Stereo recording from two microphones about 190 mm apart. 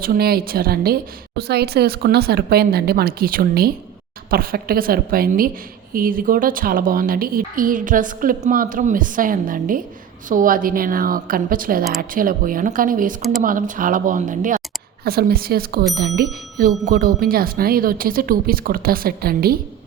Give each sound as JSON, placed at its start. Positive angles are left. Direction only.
{"t": 0.0, "sound": "speech", "side_deg": -55}